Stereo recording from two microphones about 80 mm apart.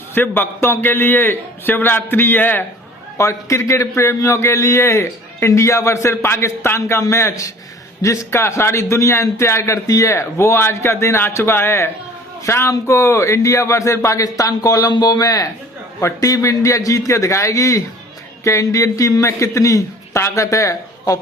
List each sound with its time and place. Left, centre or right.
0.1 s a man's voice: left
3.2 s a man's voice: left